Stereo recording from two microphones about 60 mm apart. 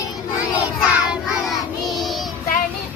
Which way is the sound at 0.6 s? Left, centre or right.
Right.